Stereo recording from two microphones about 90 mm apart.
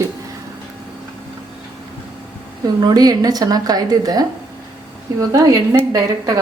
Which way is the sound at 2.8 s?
45° right (ahead or behind).